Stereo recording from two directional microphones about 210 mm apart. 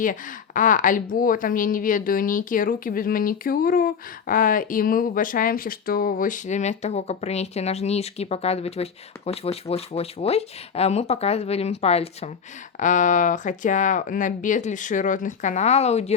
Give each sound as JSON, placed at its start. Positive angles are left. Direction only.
{"t": 0.0, "sound": "a woman's voice", "side_deg": 40}